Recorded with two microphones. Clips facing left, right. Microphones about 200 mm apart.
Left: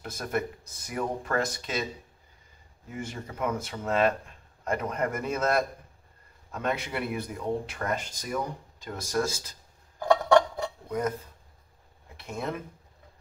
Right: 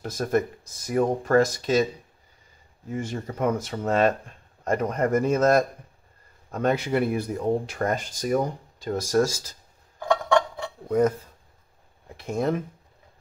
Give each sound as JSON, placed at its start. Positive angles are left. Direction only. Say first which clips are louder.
{"t": 0.0, "sound": "speech", "louder": "right 7 dB", "side_deg": -40}
{"t": 2.9, "sound": "speech", "louder": "right 7 dB", "side_deg": -40}
{"t": 9.9, "sound": "a sound", "louder": "left 1 dB", "side_deg": 40}
{"t": 10.9, "sound": "speech", "louder": "right 9 dB", "side_deg": -35}